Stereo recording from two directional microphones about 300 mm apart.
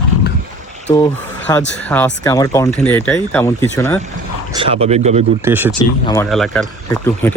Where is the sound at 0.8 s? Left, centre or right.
Centre.